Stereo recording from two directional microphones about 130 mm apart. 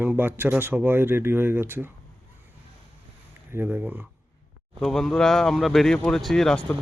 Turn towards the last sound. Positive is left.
turn(degrees=5)  # may be behind; listen again after turning